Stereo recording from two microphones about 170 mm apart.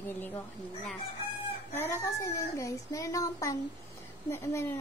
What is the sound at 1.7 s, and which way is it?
A woman's voice, 15° left (ahead or behind).